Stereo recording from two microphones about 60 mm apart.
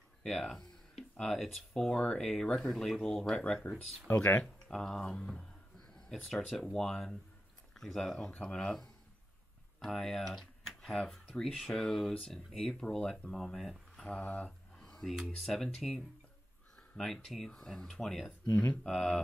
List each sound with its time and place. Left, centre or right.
0.2 s speech: centre
14.1 s speech: left
15.3 s speech: centre
18.5 s speech: centre
18.9 s speech: centre